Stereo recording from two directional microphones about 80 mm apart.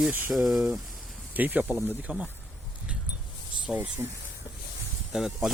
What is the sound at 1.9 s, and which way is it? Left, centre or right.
Speech, centre.